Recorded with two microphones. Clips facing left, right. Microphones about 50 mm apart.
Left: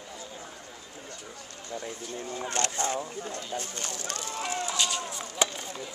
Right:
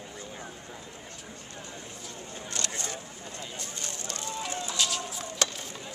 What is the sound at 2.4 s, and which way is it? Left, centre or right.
Speech, left.